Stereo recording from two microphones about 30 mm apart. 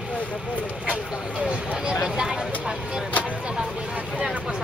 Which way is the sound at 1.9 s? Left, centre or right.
Right.